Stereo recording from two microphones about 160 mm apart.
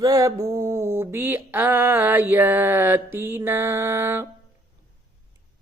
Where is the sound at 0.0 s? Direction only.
20° right (ahead or behind).